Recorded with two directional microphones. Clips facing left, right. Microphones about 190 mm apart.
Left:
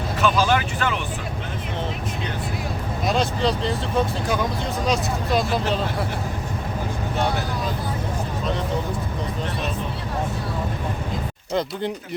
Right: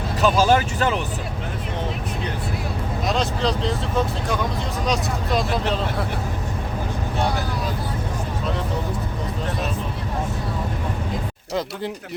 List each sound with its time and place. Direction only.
0.2 s speech: 40° right (ahead or behind)
3.1 s speech: centre (ahead or behind)